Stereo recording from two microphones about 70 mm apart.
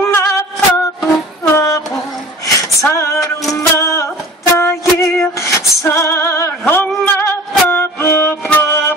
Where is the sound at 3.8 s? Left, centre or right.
Left.